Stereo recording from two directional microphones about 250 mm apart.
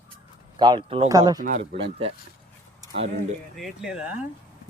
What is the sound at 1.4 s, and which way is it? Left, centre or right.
Speech, right.